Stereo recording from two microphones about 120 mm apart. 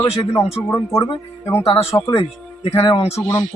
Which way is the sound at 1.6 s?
50° left (ahead or behind).